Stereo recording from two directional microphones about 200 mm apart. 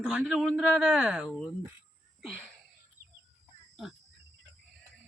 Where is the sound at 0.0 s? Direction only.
5° right (ahead or behind).